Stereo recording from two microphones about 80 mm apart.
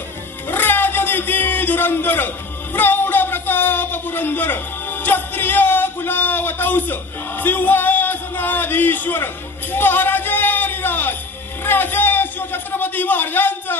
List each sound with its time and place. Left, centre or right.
0.4 s a sound: left
2.7 s speech: left
9.7 s music: left
11.6 s a man's voice: left